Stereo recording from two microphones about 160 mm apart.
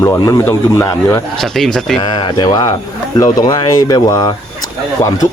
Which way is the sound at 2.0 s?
30° left (ahead or behind).